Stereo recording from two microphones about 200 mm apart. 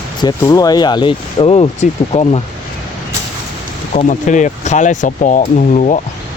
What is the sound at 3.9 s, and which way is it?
Speech, 35° left (ahead or behind).